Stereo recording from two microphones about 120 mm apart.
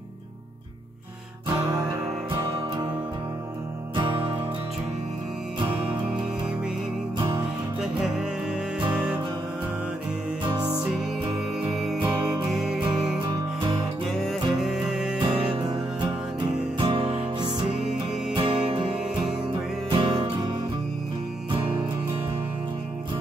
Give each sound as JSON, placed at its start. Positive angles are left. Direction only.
{"t": 7.2, "sound": "music", "side_deg": -35}
{"t": 7.8, "sound": "music", "side_deg": -5}
{"t": 11.7, "sound": "music", "side_deg": 0}
{"t": 14.2, "sound": "music", "side_deg": -5}
{"t": 15.1, "sound": "music", "side_deg": -45}
{"t": 19.9, "sound": "music", "side_deg": -40}